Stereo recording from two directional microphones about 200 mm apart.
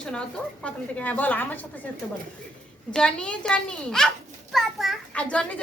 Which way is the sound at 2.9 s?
5° left (ahead or behind).